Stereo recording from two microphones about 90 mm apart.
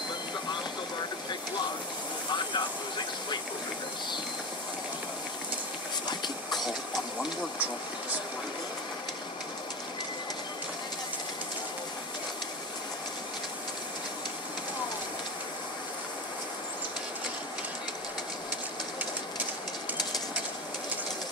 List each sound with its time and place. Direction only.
2.2 s vehicle: 60° left (ahead or behind)